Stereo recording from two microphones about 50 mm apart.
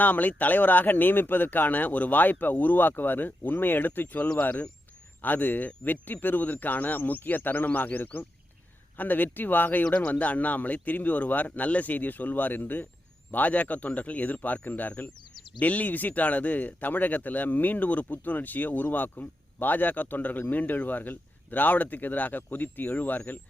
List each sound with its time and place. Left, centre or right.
0.0 s speech: left
9.8 s speech: centre; by 23.4 s left